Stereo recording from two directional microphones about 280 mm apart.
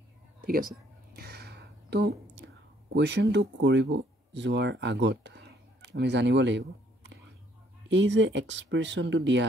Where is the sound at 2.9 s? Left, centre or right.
Right.